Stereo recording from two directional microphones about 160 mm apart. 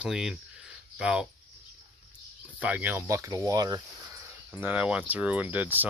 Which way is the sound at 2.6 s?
10° right (ahead or behind).